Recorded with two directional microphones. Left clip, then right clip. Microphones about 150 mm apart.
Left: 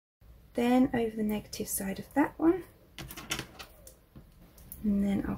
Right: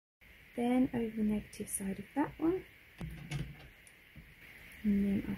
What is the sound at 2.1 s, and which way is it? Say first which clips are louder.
Speech: left 7 dB; 20° right (ahead or behind).